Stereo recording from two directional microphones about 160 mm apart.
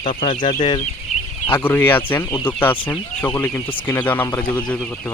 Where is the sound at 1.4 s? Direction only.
15° left (ahead or behind).